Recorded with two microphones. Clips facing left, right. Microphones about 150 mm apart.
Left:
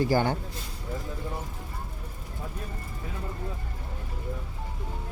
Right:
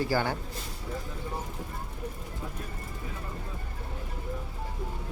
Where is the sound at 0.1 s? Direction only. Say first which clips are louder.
Left 4 dB; 20° left (ahead or behind).